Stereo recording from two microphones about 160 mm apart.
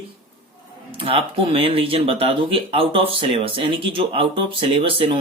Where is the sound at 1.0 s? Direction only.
35° right (ahead or behind).